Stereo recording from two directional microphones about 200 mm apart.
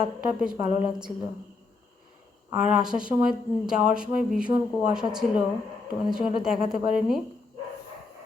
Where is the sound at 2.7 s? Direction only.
5° right (ahead or behind).